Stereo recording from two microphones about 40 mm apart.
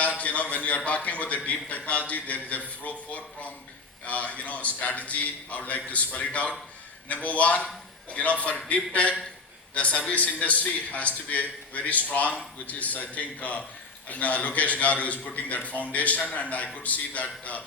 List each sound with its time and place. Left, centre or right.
0.0 s a man's voice: left